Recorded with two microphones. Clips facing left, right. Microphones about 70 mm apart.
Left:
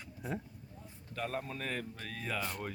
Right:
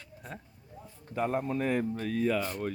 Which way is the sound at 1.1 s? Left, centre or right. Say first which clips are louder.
Right 9 dB; centre.